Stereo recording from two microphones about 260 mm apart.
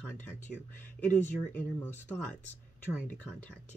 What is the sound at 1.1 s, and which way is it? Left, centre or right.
Speech, centre.